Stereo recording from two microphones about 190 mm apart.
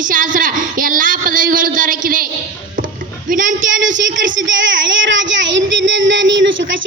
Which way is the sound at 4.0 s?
75° right (ahead or behind).